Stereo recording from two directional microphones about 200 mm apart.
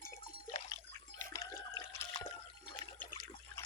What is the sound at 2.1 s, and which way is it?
Liquid, 30° left (ahead or behind).